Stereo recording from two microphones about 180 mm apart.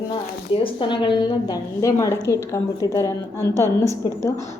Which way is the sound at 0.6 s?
30° left (ahead or behind).